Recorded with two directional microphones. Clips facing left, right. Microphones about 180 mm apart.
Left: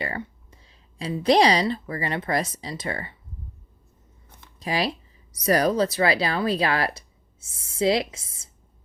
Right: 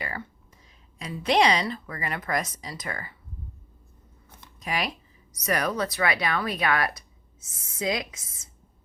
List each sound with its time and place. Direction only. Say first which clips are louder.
0.0 s a sound: left 5 dB; 30° left (ahead or behind)
1.6 s speech: left 6 dB; 30° left (ahead or behind)
4.6 s speech: left 4 dB; 30° left (ahead or behind)